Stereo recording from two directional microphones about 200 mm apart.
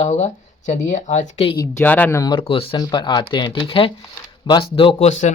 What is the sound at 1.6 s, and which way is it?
Speech, 10° left (ahead or behind).